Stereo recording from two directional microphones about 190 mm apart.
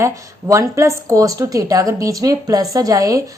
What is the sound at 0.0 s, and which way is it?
Speech, 15° right (ahead or behind).